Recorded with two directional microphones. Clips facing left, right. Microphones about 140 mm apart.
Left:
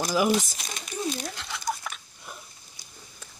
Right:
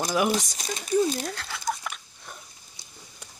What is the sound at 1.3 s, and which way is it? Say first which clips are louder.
Patter: right 1 dB; centre (ahead or behind).